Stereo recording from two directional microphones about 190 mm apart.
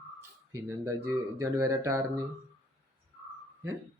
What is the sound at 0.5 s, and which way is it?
Speech, 15° right (ahead or behind).